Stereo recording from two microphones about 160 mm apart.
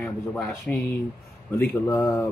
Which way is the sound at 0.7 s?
5° left (ahead or behind).